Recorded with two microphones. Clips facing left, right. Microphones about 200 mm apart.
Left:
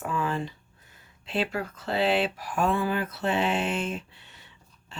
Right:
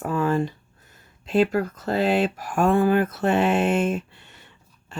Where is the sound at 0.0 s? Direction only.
45° right (ahead or behind).